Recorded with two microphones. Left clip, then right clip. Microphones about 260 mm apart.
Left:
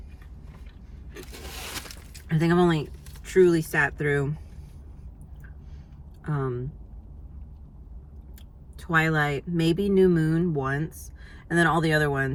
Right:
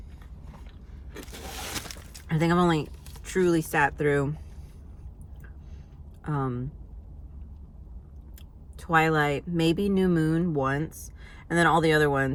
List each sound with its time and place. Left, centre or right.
1.2 s a sound: right
2.2 s speech: centre
6.2 s speech: centre
8.8 s speech: centre